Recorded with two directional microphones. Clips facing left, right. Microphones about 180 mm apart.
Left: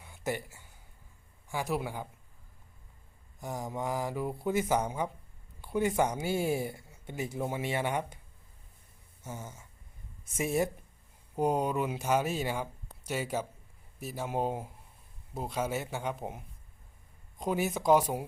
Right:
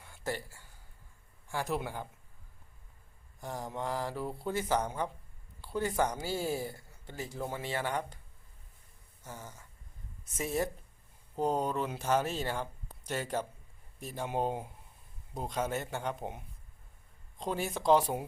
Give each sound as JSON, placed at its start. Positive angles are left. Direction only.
{"t": 0.0, "sound": "a sound", "side_deg": 15}
{"t": 1.5, "sound": "speech", "side_deg": 15}
{"t": 3.4, "sound": "speech", "side_deg": 10}
{"t": 9.4, "sound": "speech", "side_deg": 10}